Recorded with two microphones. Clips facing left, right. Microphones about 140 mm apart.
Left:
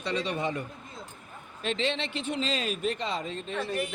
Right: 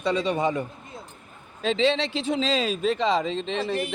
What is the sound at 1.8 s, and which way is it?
Speech, 90° right.